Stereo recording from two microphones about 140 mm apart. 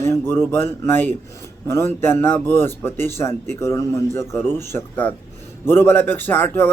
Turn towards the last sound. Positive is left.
turn(degrees=15)  # may be behind; listen again after turning